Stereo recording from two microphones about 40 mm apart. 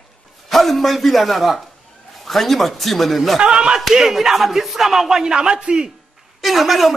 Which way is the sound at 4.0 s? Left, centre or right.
Centre.